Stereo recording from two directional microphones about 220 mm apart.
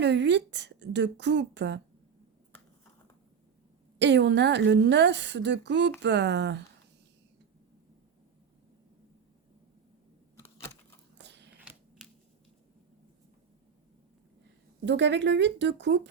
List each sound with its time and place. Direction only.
0.0 s a woman's voice: 50° right (ahead or behind)
3.9 s a woman's voice: 50° right (ahead or behind)
10.3 s computer keyboard: 10° left (ahead or behind)
11.2 s a sound: 50° right (ahead or behind)
11.6 s a sound: 5° right (ahead or behind)
14.8 s a woman's voice: 55° right (ahead or behind)